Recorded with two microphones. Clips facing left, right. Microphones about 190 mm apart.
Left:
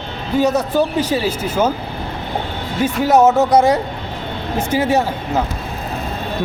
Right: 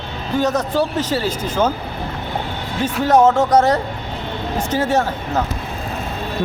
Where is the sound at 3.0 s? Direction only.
10° left (ahead or behind).